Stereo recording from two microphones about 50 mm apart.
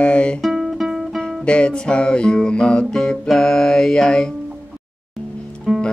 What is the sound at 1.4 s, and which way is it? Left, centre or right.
Music, left.